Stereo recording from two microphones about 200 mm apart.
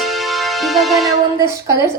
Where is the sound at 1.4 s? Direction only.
15° right (ahead or behind).